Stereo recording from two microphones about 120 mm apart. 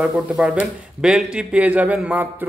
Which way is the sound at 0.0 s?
10° right (ahead or behind).